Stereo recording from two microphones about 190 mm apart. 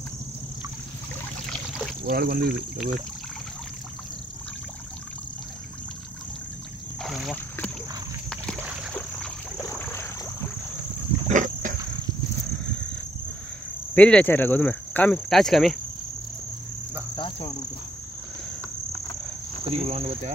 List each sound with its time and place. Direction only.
1.5 s trickle: centre (ahead or behind)
2.0 s speech: 50° right (ahead or behind)
7.0 s cricket: centre (ahead or behind)
8.9 s rowboat: 10° left (ahead or behind)
11.2 s a sound: 40° right (ahead or behind)
13.9 s speech: 5° left (ahead or behind)
17.1 s insect: 25° left (ahead or behind)
19.6 s cricket: 30° right (ahead or behind)